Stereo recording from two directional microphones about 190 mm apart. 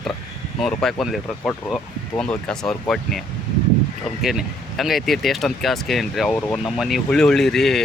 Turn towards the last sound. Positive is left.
turn(degrees=0)  # may be behind; listen again after turning